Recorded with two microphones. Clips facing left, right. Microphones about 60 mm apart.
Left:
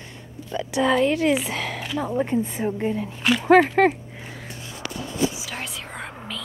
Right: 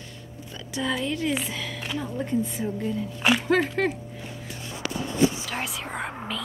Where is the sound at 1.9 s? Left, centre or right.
Left.